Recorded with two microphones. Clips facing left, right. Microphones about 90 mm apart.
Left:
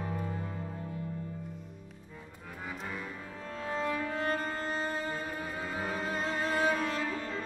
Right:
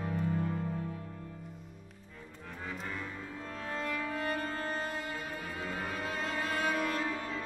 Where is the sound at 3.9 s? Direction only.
25° left (ahead or behind).